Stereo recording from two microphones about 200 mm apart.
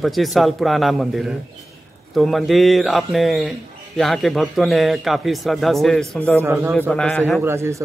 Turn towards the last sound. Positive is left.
turn(degrees=-15)  # may be behind; listen again after turning